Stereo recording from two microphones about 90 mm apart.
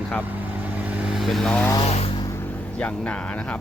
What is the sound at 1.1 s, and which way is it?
Vehicle, centre (ahead or behind).